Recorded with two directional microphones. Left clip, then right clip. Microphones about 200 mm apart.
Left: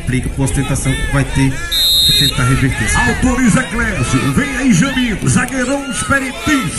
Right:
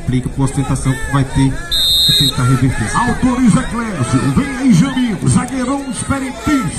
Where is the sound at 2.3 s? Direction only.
35° right (ahead or behind).